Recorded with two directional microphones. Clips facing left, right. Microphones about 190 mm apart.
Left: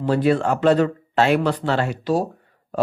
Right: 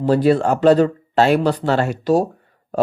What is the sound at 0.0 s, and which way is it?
Speech, 35° right (ahead or behind).